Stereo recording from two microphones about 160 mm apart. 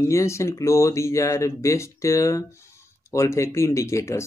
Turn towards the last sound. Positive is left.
turn(degrees=15)  # may be behind; listen again after turning